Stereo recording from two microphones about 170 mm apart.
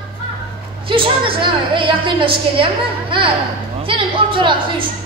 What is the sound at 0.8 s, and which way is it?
A woman's voice, 30° right (ahead or behind).